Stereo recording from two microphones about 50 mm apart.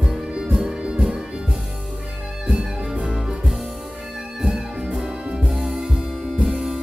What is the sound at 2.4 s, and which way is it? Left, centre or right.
Music, centre.